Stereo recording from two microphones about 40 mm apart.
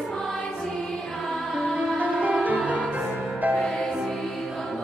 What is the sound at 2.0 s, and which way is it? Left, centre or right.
Music, right.